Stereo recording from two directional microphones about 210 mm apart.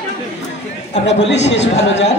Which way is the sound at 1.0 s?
55° left (ahead or behind).